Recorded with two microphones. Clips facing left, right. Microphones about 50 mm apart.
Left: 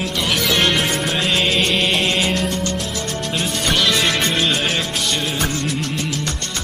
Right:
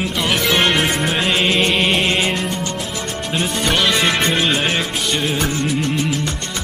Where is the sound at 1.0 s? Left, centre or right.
Centre.